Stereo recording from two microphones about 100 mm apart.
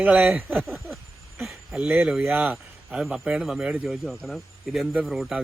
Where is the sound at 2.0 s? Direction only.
10° right (ahead or behind).